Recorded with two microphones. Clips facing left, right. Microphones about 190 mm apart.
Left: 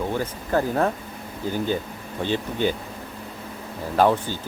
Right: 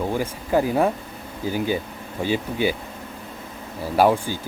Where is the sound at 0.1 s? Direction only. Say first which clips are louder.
Right 2 dB; 10° right (ahead or behind).